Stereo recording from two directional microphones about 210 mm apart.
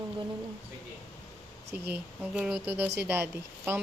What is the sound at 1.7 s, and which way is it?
Speech, 10° right (ahead or behind).